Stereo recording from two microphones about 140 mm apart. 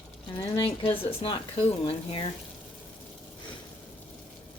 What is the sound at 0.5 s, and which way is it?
Speech, 40° left (ahead or behind).